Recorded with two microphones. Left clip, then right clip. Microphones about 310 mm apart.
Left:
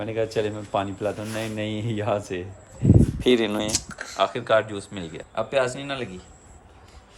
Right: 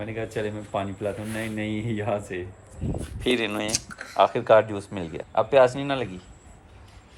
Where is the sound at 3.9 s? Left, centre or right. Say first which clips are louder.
Left 3 dB; left.